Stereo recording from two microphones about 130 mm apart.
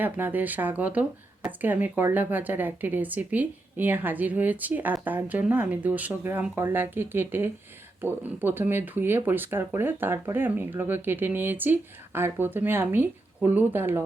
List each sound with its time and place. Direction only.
0.0 s speech: 15° right (ahead or behind)